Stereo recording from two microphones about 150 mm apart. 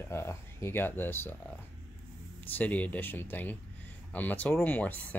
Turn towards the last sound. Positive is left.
turn(degrees=10)  # may be behind; listen again after turning